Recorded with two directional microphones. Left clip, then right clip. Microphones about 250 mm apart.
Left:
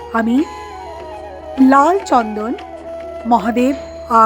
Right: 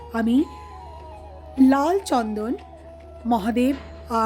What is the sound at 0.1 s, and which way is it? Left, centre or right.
Speech, centre.